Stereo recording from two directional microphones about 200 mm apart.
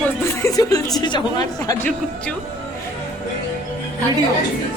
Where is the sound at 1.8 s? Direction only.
5° left (ahead or behind).